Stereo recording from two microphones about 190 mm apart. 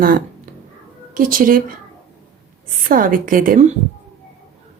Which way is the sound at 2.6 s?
45° right (ahead or behind).